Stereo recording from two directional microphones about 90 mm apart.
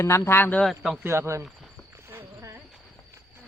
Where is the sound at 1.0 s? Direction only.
30° right (ahead or behind).